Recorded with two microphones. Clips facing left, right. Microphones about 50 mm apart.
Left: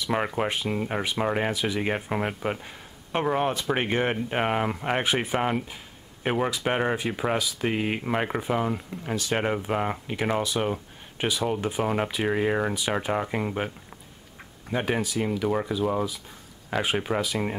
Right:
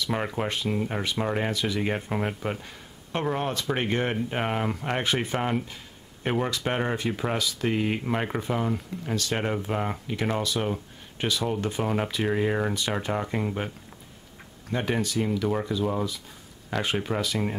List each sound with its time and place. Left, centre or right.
0.0 s speech: centre
14.7 s speech: centre